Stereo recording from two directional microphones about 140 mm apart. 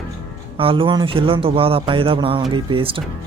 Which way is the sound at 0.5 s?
40° right (ahead or behind).